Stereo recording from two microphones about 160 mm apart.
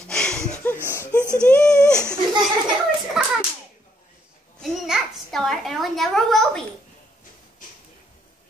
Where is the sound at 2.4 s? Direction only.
Centre (ahead or behind).